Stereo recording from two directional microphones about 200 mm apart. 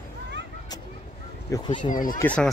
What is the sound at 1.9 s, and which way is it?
Speech, 45° left (ahead or behind).